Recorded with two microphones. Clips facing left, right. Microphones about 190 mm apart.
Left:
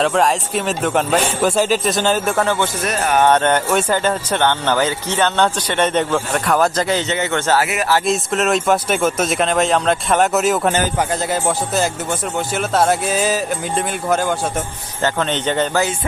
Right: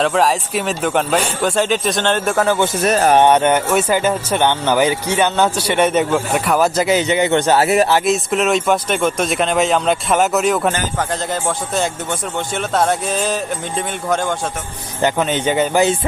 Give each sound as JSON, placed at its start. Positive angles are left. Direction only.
{"t": 0.0, "sound": "speech", "side_deg": 0}
{"t": 2.8, "sound": "speech", "side_deg": -30}
{"t": 3.2, "sound": "speech", "side_deg": -10}
{"t": 7.6, "sound": "speech", "side_deg": -30}
{"t": 8.0, "sound": "speech", "side_deg": 0}
{"t": 15.0, "sound": "speech", "side_deg": -10}